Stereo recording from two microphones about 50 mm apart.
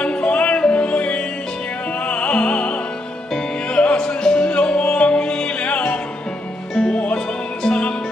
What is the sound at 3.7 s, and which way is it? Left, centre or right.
Music, left.